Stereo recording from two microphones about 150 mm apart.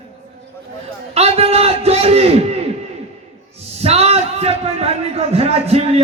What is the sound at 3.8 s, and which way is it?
A man's voice, 45° right (ahead or behind).